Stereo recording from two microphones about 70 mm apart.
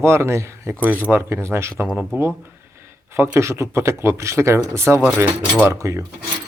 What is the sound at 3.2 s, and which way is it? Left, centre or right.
Speech, right.